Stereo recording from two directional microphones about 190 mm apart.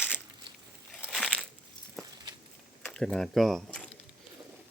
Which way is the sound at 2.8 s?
5° left (ahead or behind).